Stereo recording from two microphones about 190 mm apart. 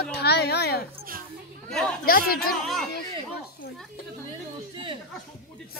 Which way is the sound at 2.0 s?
50° left (ahead or behind).